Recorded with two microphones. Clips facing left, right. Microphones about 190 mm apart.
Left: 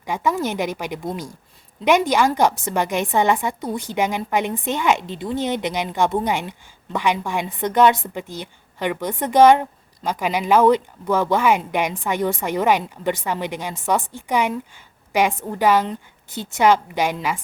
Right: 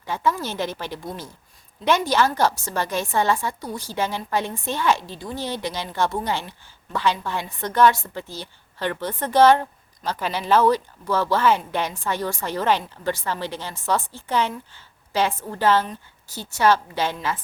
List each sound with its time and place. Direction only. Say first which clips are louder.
0.0 s a woman's voice: left 3 dB; 15° left (ahead or behind)
15.5 s a woman's voice: left 2 dB; 15° left (ahead or behind)